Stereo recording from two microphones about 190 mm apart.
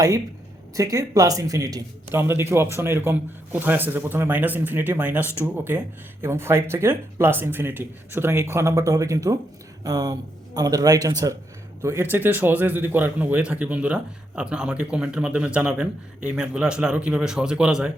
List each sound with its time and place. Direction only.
0.8 s speech: 20° right (ahead or behind)
5.2 s speech: 15° left (ahead or behind)
6.2 s a man's voice: 15° right (ahead or behind)